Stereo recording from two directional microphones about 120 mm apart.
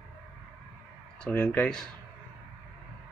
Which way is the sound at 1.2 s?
10° left (ahead or behind).